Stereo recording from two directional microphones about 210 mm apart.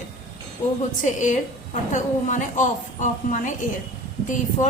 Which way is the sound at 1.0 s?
35° left (ahead or behind).